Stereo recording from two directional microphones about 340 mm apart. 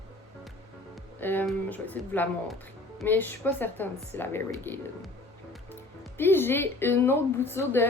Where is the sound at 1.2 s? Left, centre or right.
Centre.